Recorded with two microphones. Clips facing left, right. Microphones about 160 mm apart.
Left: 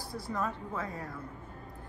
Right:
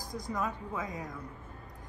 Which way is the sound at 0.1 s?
15° right (ahead or behind).